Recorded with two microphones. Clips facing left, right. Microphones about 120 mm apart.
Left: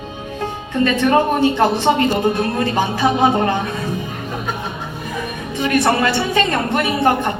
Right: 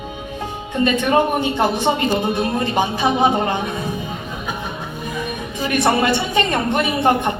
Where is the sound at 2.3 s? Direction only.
20° right (ahead or behind).